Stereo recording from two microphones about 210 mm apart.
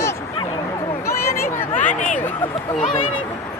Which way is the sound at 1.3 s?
45° left (ahead or behind).